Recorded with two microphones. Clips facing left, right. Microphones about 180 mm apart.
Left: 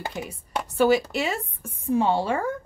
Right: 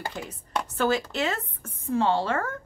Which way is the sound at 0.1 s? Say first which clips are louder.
Left 1 dB; 10° left (ahead or behind).